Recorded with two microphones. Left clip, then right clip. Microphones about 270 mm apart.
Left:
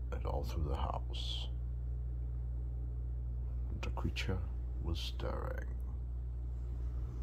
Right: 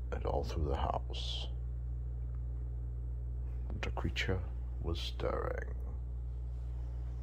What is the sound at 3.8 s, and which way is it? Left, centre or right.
Speech, centre.